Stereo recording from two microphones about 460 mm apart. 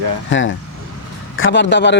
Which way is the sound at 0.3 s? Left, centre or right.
Left.